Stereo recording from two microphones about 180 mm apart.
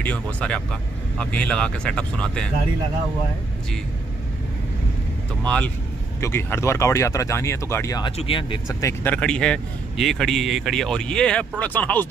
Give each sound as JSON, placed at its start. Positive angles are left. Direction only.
{"t": 0.0, "sound": "speech", "side_deg": 5}
{"t": 5.4, "sound": "speech", "side_deg": 5}